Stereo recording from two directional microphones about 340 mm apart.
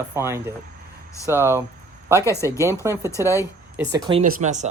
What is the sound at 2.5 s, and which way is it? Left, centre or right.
A man's voice, centre.